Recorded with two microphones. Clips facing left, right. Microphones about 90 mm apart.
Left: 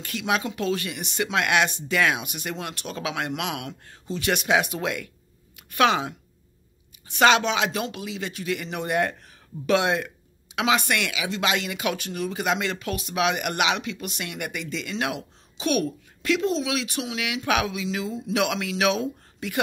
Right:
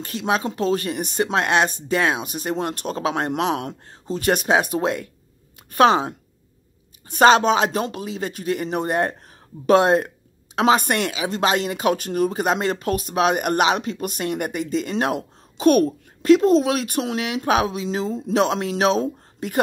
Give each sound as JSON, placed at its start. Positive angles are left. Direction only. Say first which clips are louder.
{"t": 0.0, "sound": "speech", "louder": "right 3 dB", "side_deg": -35}